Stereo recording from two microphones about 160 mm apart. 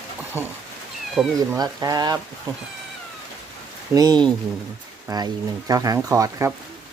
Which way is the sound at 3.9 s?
25° right (ahead or behind).